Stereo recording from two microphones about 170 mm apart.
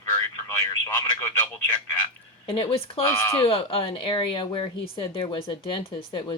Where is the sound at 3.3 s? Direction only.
35° left (ahead or behind).